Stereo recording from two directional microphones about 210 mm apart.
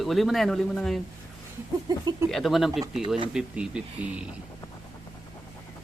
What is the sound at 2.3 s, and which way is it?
Speech, centre (ahead or behind).